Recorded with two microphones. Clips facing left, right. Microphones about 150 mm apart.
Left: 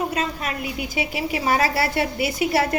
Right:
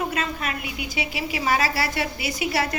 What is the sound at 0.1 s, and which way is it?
A woman's voice, 35° left (ahead or behind).